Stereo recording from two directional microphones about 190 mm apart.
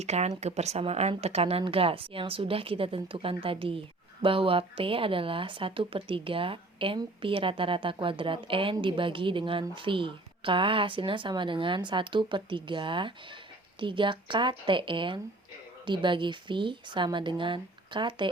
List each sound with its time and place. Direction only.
0.0 s speech: 35° right (ahead or behind)